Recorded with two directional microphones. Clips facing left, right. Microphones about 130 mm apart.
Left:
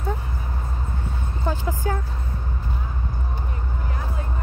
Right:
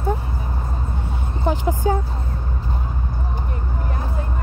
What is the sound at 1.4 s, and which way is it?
Speech, 20° right (ahead or behind).